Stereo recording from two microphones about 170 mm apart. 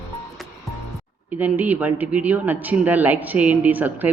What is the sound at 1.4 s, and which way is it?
Speech, 10° right (ahead or behind).